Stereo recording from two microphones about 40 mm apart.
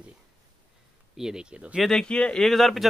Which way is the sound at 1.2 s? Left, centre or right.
Centre.